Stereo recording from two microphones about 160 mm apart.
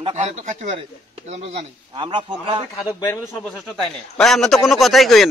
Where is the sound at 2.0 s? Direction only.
30° right (ahead or behind).